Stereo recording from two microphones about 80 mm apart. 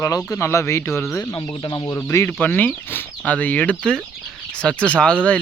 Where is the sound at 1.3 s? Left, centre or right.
Left.